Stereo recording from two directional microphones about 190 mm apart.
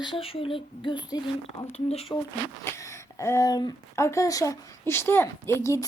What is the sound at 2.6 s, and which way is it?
Speech, 15° left (ahead or behind).